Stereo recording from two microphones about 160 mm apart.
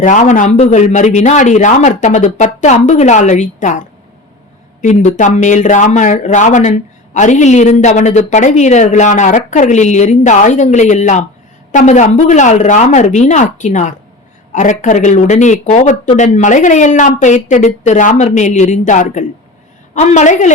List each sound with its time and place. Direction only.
0.0 s speech: 50° left (ahead or behind)